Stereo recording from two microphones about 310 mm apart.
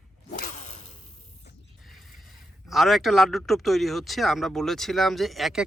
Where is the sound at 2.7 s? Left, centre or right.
Centre.